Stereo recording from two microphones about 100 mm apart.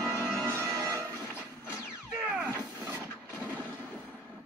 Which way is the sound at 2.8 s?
15° right (ahead or behind).